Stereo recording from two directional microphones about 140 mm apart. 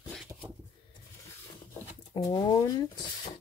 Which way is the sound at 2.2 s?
25° left (ahead or behind).